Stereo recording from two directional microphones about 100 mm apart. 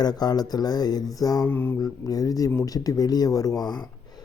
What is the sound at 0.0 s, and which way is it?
Speech, 40° left (ahead or behind).